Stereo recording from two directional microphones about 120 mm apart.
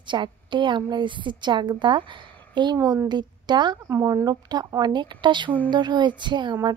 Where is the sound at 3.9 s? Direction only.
25° right (ahead or behind).